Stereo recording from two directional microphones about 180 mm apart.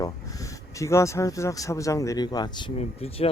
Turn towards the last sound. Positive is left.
turn(degrees=35)  # may be behind; listen again after turning